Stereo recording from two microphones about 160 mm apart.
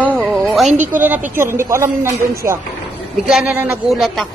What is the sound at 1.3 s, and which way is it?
Speech, 15° right (ahead or behind).